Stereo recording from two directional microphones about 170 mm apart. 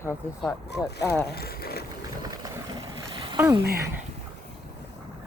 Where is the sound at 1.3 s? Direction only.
65° left (ahead or behind).